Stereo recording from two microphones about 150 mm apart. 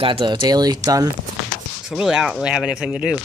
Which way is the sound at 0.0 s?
35° right (ahead or behind).